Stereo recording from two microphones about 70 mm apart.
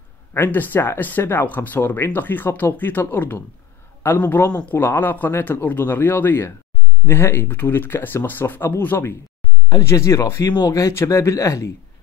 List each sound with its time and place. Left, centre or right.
0.3 s speech: left
9.7 s speech: left